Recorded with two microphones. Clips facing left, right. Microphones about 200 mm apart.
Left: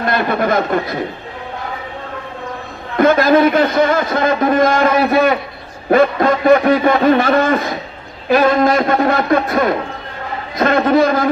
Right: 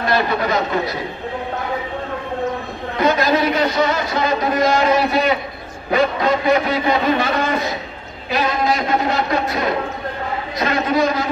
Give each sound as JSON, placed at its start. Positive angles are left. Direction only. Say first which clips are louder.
{"t": 0.0, "sound": "speech", "louder": "left 2 dB", "side_deg": 50}
{"t": 3.0, "sound": "speech", "louder": "left 6 dB", "side_deg": 55}